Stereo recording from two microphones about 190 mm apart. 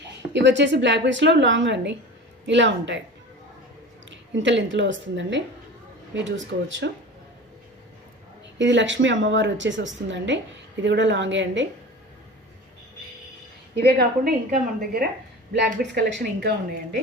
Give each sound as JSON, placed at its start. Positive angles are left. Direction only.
{"t": 0.3, "sound": "a woman's voice", "side_deg": -70}
{"t": 4.1, "sound": "a woman's voice", "side_deg": -75}
{"t": 8.5, "sound": "a woman's voice", "side_deg": -75}
{"t": 13.7, "sound": "a woman's voice", "side_deg": -55}
{"t": 15.5, "sound": "a woman's voice", "side_deg": -60}